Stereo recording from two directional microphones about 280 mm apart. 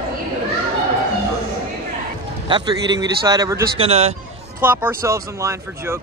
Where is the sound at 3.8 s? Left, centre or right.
Right.